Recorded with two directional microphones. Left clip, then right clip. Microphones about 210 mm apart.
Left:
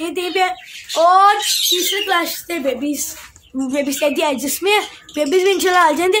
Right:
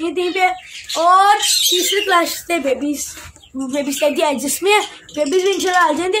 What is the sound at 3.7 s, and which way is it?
Speech, 20° left (ahead or behind).